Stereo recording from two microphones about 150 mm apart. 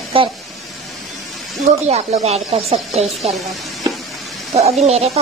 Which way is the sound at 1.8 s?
45° right (ahead or behind).